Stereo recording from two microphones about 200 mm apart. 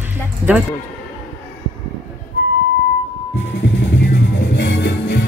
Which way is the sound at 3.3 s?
65° left (ahead or behind).